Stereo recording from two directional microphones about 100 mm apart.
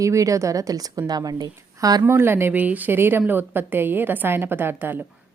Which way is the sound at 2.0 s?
25° right (ahead or behind).